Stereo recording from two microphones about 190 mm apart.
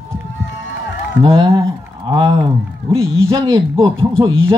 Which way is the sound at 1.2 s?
30° right (ahead or behind).